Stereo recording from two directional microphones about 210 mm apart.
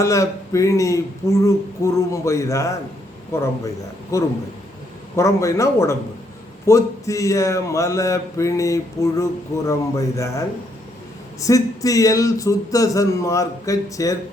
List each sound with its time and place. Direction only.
0.0 s a man's voice: 15° left (ahead or behind)